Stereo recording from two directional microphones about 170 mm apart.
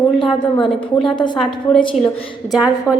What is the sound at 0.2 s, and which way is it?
A woman's voice, 30° left (ahead or behind).